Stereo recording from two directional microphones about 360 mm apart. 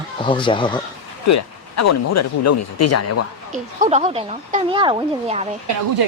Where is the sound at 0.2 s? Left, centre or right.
Centre.